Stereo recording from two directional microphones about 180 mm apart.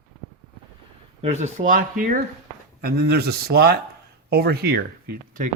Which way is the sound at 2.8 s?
60° right (ahead or behind).